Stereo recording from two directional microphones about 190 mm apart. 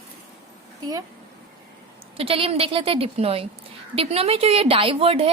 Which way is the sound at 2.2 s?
30° right (ahead or behind).